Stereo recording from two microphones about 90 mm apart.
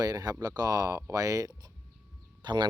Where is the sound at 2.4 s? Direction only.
55° right (ahead or behind).